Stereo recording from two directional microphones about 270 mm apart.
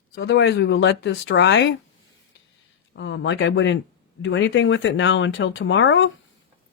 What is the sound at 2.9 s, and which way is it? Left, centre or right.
Speech, left.